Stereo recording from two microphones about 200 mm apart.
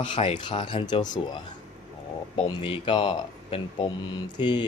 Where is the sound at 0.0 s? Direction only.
25° left (ahead or behind).